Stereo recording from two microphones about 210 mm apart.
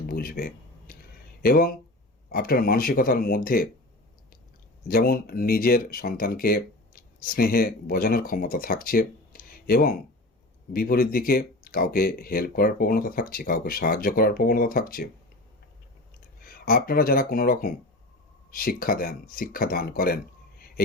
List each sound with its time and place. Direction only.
0.1 s speech: 45° left (ahead or behind)
4.9 s speech: 45° left (ahead or behind)
16.4 s speech: 45° left (ahead or behind)